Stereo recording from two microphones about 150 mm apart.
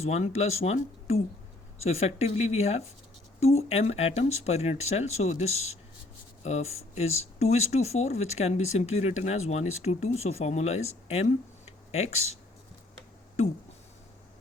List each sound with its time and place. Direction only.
0.0 s speech: 45° left (ahead or behind)